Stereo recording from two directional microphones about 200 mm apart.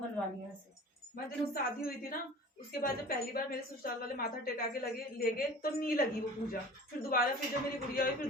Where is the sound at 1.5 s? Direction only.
50° left (ahead or behind).